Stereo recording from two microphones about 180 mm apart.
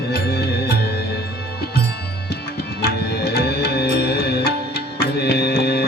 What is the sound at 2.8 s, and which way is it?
Music, 60° left (ahead or behind).